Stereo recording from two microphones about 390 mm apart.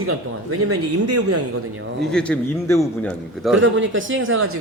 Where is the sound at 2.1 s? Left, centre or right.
Centre.